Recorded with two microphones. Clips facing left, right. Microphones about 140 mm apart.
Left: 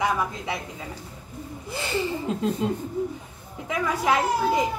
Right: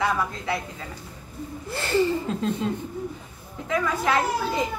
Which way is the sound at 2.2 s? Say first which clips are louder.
Left 1 dB; 15° left (ahead or behind).